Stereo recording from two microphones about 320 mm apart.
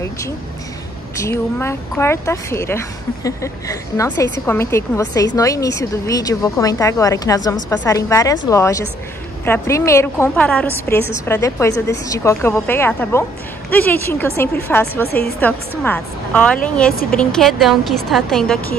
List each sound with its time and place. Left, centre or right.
1.1 s a woman's voice: centre
16.9 s a woman's voice: left
17.2 s a woman's voice: centre